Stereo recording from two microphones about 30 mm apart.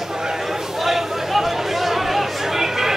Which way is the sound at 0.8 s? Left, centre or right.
Centre.